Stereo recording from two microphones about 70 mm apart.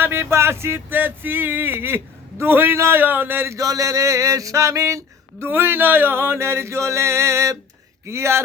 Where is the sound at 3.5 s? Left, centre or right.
Right.